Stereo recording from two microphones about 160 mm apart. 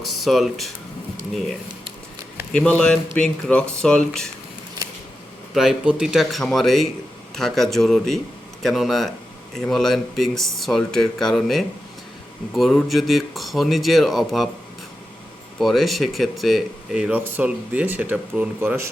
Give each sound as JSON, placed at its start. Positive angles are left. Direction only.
{"t": 0.0, "sound": "speech", "side_deg": 0}
{"t": 2.5, "sound": "speech", "side_deg": 5}
{"t": 5.5, "sound": "speech", "side_deg": -5}
{"t": 15.5, "sound": "speech", "side_deg": 0}